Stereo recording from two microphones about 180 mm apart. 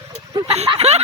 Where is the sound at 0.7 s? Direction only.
35° right (ahead or behind).